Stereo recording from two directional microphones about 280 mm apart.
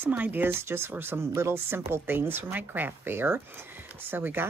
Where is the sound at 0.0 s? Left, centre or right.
Centre.